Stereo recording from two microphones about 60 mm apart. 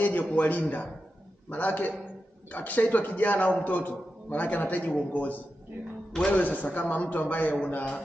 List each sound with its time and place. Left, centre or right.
0.0 s a man's voice: left